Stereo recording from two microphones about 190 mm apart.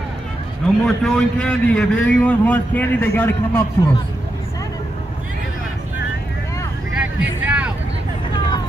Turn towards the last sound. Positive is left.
turn(degrees=-5)  # may be behind; listen again after turning